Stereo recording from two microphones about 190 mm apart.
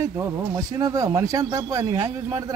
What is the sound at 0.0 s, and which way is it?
Speech, 15° right (ahead or behind).